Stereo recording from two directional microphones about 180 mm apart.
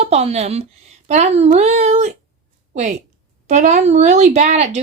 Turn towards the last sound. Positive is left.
turn(degrees=-40)  # may be behind; listen again after turning